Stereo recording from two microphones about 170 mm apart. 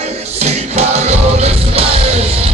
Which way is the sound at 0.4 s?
40° right (ahead or behind).